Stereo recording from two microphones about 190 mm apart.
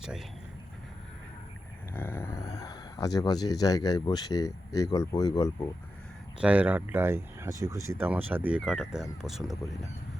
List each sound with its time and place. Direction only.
1.9 s speech: 10° left (ahead or behind)
6.4 s speech: 5° right (ahead or behind)